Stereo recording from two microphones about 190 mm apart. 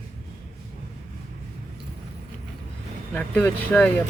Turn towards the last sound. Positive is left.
turn(degrees=5)  # may be behind; listen again after turning